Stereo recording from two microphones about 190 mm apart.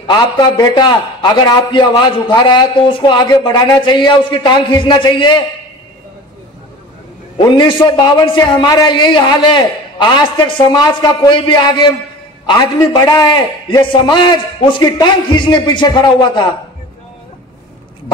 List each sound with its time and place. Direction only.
0.0 s a man's voice: 25° left (ahead or behind)
7.3 s a man's voice: 25° left (ahead or behind)